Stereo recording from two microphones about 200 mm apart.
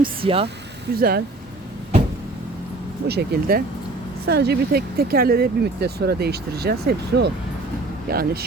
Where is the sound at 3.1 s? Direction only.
55° right (ahead or behind).